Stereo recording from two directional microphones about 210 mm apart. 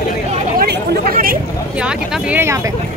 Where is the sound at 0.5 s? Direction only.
50° right (ahead or behind).